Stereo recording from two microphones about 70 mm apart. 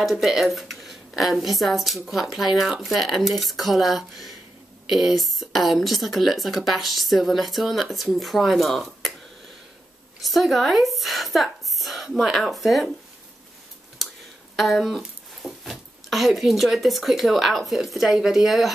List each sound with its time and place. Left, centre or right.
0.0 s speech: centre
10.2 s a woman's voice: centre
14.0 s a sound: centre
14.5 s speech: centre